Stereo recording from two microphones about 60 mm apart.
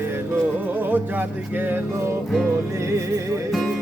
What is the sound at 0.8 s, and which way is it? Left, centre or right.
Music, right.